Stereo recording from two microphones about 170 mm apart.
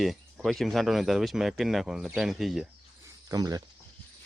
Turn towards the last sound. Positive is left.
turn(degrees=-20)  # may be behind; listen again after turning